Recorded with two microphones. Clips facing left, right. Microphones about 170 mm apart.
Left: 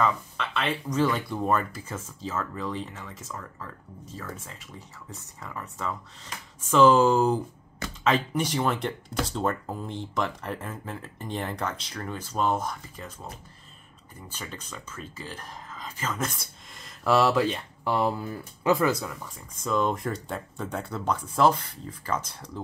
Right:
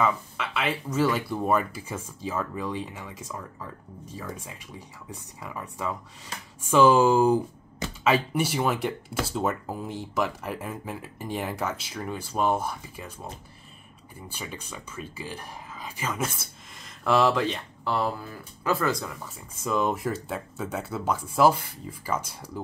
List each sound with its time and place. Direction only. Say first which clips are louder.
0.0 s speech: even; 10° right (ahead or behind)
14.3 s speech: right 1 dB; 10° right (ahead or behind); by 17.9 s 5° left (ahead or behind)
17.9 s speech: left 2 dB; 20° left (ahead or behind)
19.2 s speech: right 1 dB; 5° right (ahead or behind)